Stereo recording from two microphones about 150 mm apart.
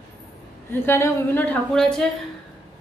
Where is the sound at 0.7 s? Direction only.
15° left (ahead or behind).